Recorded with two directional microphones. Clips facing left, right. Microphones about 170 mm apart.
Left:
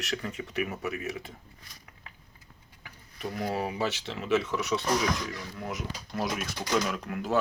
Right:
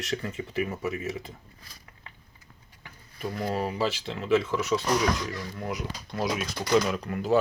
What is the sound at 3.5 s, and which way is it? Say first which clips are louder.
Speech: right 3 dB; 10° left (ahead or behind).